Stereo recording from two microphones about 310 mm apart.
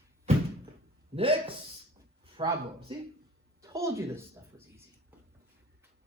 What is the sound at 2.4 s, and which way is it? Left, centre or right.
A man's voice, centre.